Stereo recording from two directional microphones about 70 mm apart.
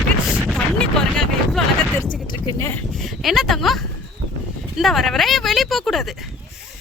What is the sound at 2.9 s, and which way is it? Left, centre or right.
Speech, centre.